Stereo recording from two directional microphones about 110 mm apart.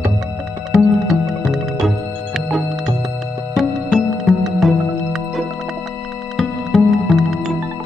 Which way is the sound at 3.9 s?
Centre (ahead or behind).